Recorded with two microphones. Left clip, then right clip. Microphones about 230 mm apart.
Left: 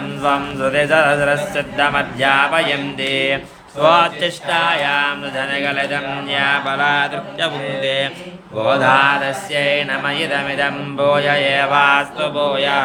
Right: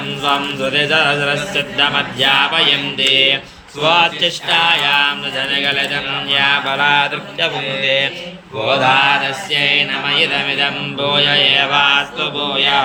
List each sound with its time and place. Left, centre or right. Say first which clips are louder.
0.2 s mantra: even; centre